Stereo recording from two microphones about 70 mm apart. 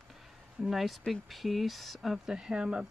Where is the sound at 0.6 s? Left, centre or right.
Centre.